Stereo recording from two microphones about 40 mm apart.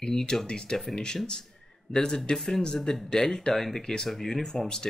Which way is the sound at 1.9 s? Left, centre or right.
Centre.